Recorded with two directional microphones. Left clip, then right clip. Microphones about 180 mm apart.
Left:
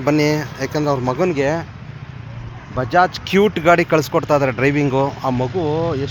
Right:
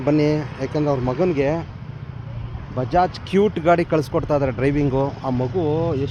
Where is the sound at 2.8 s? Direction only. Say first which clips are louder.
Left 4 dB; 5° left (ahead or behind).